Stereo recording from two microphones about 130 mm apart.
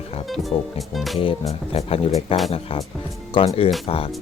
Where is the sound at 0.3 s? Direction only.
Centre (ahead or behind).